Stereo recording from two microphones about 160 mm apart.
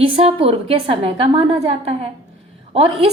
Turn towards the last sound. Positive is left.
turn(degrees=-40)  # may be behind; listen again after turning